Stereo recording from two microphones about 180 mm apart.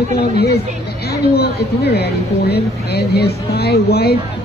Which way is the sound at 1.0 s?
60° left (ahead or behind).